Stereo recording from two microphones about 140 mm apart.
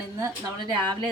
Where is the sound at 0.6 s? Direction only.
30° right (ahead or behind).